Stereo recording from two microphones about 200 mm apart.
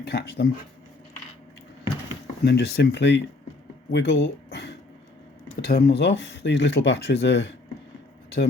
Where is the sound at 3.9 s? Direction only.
60° left (ahead or behind).